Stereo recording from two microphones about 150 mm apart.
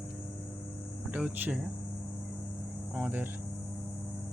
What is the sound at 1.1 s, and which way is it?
Speech, 10° right (ahead or behind).